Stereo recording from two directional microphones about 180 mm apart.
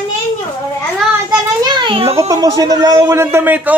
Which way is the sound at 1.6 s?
25° right (ahead or behind).